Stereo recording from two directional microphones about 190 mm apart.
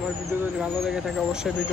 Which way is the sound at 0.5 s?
Centre (ahead or behind).